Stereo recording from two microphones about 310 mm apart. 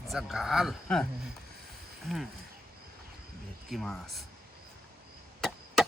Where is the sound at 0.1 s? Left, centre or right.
Centre.